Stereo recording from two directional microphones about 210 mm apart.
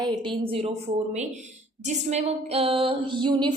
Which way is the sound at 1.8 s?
30° right (ahead or behind).